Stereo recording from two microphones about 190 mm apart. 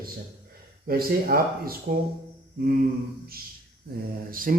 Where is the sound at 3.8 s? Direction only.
55° right (ahead or behind).